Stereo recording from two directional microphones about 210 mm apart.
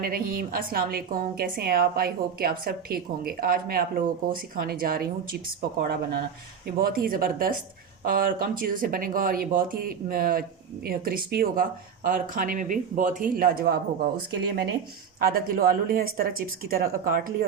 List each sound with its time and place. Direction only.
0.0 s a woman's voice: 45° right (ahead or behind)
6.7 s a woman's voice: 45° right (ahead or behind)